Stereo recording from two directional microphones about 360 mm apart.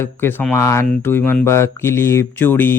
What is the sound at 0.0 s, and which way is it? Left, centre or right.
Speech, centre.